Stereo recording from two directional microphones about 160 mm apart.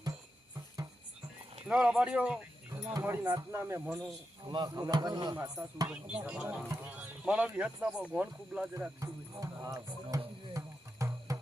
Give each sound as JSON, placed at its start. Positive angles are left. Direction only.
{"t": 1.6, "sound": "speech", "side_deg": -5}
{"t": 2.8, "sound": "speech", "side_deg": -15}
{"t": 4.4, "sound": "speech", "side_deg": -25}
{"t": 5.9, "sound": "speech", "side_deg": -10}
{"t": 9.0, "sound": "music", "side_deg": -20}